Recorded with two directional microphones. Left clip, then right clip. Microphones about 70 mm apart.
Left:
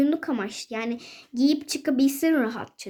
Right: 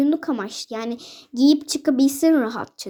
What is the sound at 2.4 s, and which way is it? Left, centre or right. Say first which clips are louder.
Speech: right 4 dB; right.